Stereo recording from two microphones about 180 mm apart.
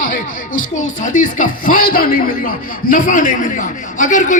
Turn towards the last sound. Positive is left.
turn(degrees=45)  # may be behind; listen again after turning